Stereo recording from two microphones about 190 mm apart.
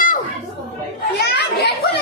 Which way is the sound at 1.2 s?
60° left (ahead or behind).